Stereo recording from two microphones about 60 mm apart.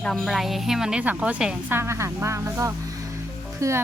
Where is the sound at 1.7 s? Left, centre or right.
Right.